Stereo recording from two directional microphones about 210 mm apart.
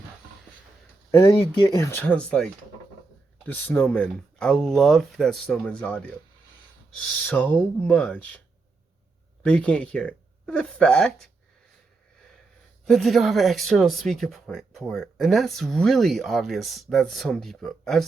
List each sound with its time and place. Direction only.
1.1 s speech: 15° left (ahead or behind)
1.4 s speech: 25° left (ahead or behind)
1.8 s speech: 10° left (ahead or behind)
9.4 s speech: 5° left (ahead or behind)
12.8 s speech: centre (ahead or behind)